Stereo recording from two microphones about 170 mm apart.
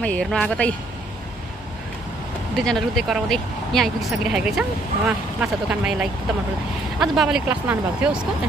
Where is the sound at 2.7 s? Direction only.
Centre (ahead or behind).